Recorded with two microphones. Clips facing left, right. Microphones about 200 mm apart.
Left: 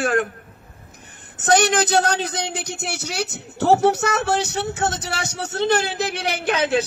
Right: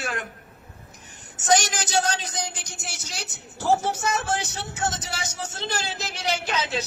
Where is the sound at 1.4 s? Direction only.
60° left (ahead or behind).